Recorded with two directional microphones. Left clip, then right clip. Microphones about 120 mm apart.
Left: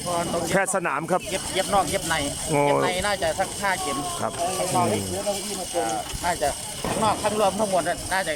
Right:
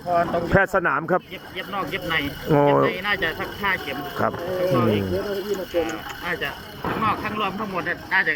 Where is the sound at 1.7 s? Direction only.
40° left (ahead or behind).